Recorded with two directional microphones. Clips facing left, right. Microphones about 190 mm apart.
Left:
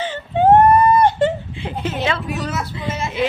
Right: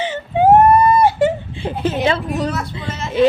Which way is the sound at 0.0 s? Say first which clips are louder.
Right 1 dB; 10° right (ahead or behind).